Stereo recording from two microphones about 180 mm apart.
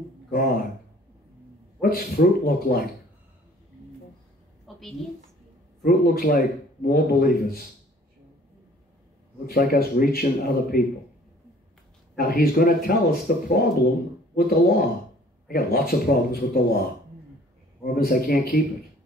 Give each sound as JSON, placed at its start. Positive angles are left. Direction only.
{"t": 0.3, "sound": "a man's voice", "side_deg": 55}
{"t": 1.8, "sound": "a man's voice", "side_deg": 55}
{"t": 4.7, "sound": "a sound", "side_deg": 0}
{"t": 5.9, "sound": "a man's voice", "side_deg": 55}
{"t": 9.5, "sound": "a man's voice", "side_deg": 55}
{"t": 12.2, "sound": "a man's voice", "side_deg": 60}
{"t": 17.8, "sound": "a man's voice", "side_deg": 55}